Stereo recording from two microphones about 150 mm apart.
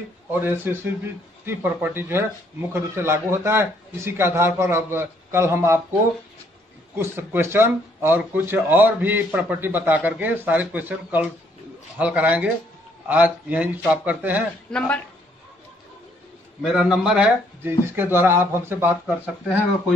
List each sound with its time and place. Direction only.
0.3 s speech: 15° right (ahead or behind)
7.0 s speech: 15° right (ahead or behind)
14.7 s speech: 5° left (ahead or behind)
16.7 s speech: 5° right (ahead or behind)